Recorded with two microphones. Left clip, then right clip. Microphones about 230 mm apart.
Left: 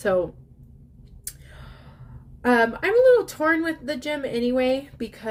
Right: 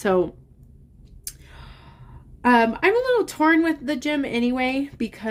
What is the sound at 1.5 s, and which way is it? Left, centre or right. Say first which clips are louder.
Gasp: right 1 dB; right.